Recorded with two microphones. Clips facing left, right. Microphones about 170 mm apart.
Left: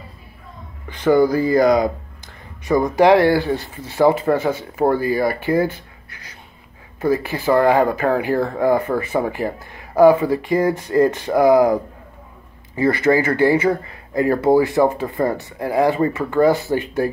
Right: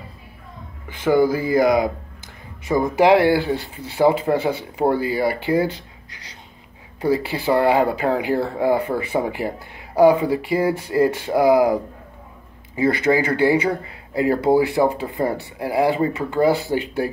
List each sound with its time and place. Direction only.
1.0 s speech: 5° right (ahead or behind)
7.0 s speech: 15° right (ahead or behind)